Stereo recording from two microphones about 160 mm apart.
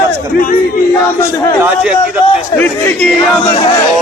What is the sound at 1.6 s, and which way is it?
Speech, 5° right (ahead or behind).